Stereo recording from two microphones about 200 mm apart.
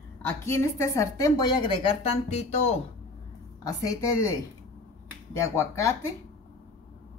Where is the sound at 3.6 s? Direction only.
15° left (ahead or behind).